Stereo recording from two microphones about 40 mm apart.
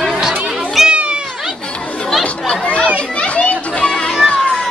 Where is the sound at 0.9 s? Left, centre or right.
Right.